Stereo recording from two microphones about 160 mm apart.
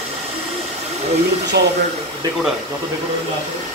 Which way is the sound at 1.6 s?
90° right.